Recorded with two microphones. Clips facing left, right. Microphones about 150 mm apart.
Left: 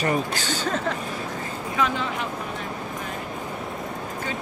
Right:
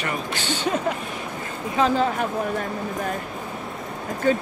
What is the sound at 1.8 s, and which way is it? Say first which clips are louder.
Speech: right 5 dB; 35° right (ahead or behind).